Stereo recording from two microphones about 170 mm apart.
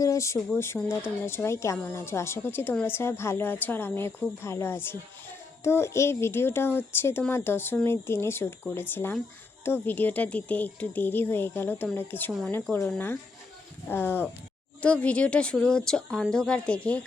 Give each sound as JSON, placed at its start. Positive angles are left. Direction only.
{"t": 0.0, "sound": "a woman's voice", "side_deg": 20}